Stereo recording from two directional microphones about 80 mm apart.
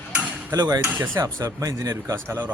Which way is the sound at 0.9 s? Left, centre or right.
Right.